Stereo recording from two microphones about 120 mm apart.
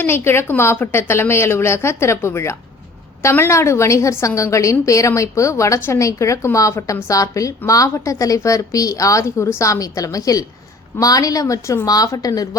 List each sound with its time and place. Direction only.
0.0 s a woman's voice: 20° left (ahead or behind)